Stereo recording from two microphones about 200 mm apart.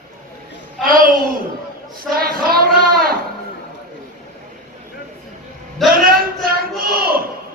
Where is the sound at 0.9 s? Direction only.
45° right (ahead or behind).